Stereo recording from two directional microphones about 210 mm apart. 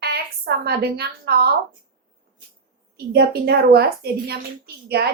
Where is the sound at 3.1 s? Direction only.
50° right (ahead or behind).